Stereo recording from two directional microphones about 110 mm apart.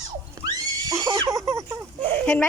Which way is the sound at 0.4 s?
35° right (ahead or behind).